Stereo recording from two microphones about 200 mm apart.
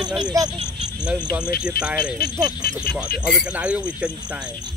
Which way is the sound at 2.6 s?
50° left (ahead or behind).